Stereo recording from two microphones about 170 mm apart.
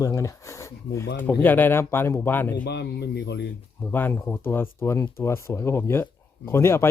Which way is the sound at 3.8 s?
10° left (ahead or behind).